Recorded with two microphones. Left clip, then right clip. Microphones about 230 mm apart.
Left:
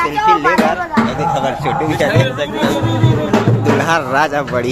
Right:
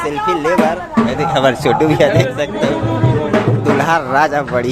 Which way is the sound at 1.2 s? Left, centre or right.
Right.